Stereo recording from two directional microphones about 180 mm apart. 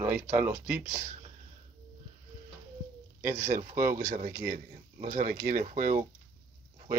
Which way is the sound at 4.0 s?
45° right (ahead or behind).